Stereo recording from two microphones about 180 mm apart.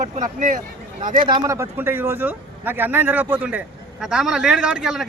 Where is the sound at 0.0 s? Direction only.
45° right (ahead or behind).